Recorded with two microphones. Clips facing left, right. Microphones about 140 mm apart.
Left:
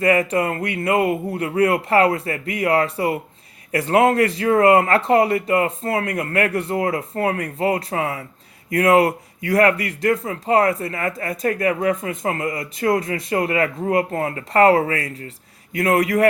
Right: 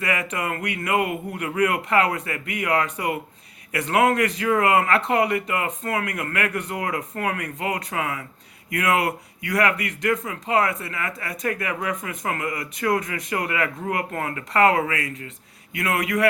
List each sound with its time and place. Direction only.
0.0 s speech: 35° left (ahead or behind)